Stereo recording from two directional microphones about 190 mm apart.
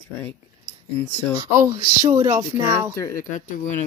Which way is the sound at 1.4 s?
15° right (ahead or behind).